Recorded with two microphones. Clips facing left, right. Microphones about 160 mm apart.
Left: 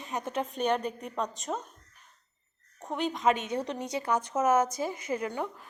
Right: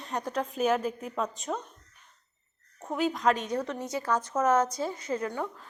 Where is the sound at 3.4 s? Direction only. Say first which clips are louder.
Right 1 dB; 25° left (ahead or behind).